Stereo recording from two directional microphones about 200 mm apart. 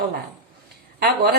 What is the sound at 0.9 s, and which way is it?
Speech, 55° right (ahead or behind).